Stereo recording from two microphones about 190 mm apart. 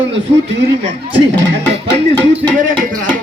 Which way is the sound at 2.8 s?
45° right (ahead or behind).